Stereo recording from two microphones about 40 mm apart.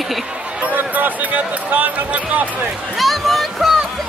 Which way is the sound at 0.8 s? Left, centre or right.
Right.